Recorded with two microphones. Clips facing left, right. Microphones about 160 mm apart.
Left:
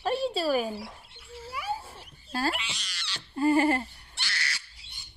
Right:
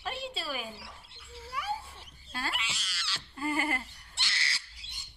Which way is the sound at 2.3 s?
40° left (ahead or behind).